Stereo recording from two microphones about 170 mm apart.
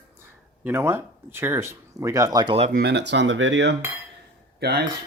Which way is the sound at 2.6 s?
85° right.